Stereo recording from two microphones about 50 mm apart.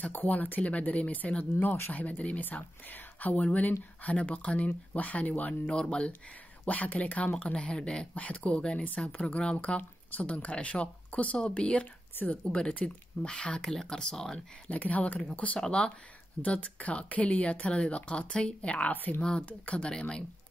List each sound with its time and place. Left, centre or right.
0.0 s speech: left
5.5 s speech: centre
6.6 s speech: left
8.1 s speech: left
13.6 s speech: centre
14.7 s speech: left
18.9 s speech: left
19.2 s speech: centre
19.9 s speech: centre